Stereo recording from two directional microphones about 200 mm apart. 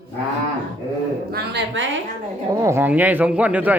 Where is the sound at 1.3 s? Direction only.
55° right (ahead or behind).